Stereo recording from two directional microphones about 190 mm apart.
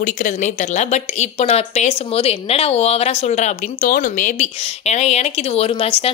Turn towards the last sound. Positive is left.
turn(degrees=30)  # may be behind; listen again after turning